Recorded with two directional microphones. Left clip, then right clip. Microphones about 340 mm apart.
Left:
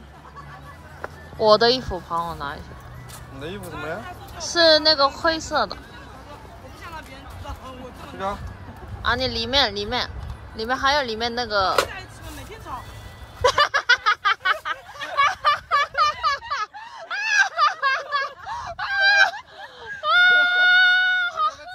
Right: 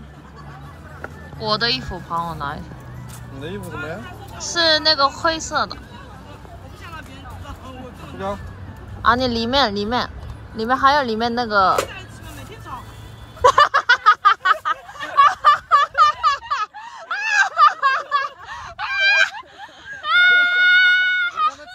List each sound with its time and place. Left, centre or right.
1.4 s speech: centre
4.5 s speech: centre
9.0 s speech: centre
13.4 s a sound: centre